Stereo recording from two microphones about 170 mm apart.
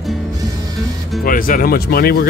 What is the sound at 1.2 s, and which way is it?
Speech, 55° left (ahead or behind).